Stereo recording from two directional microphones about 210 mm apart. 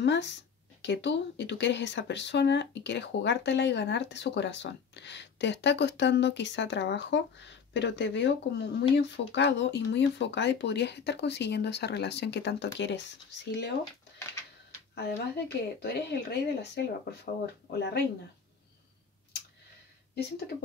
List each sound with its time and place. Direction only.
0.0 s speech: 55° left (ahead or behind)
15.0 s speech: 50° left (ahead or behind)